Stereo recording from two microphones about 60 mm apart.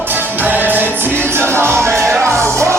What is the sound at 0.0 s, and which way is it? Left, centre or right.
Music, right.